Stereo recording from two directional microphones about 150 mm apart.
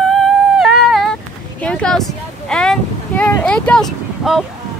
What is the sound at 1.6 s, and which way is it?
Speech, 5° left (ahead or behind).